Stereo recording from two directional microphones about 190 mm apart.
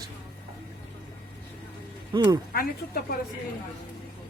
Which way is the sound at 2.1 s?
25° right (ahead or behind).